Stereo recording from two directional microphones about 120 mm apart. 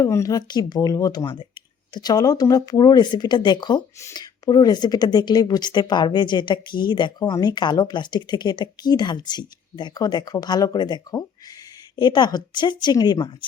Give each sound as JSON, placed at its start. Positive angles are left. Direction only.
{"t": 0.0, "sound": "speech", "side_deg": 25}